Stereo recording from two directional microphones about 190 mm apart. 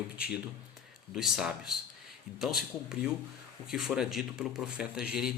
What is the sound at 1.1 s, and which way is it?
A man's voice, 5° right (ahead or behind).